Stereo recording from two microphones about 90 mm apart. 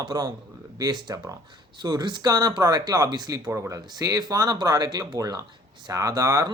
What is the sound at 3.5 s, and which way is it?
Speech, 30° right (ahead or behind).